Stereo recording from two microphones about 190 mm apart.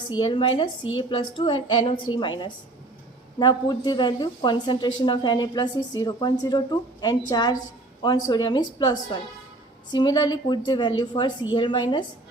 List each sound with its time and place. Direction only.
0.2 s a woman's voice: 25° left (ahead or behind)